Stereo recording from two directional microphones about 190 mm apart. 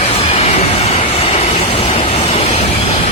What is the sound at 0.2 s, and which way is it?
Train, 30° left (ahead or behind).